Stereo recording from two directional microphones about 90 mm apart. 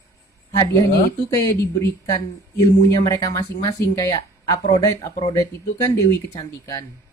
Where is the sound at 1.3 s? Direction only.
40° left (ahead or behind).